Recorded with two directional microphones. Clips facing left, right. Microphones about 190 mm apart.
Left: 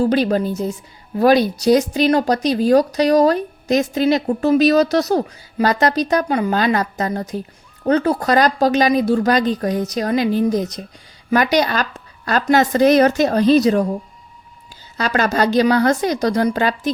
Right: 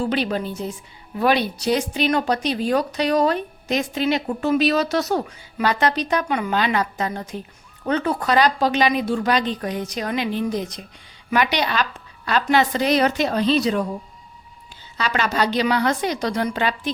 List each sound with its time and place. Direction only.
0.0 s a woman's voice: 40° left (ahead or behind)
14.9 s a woman's voice: 45° left (ahead or behind)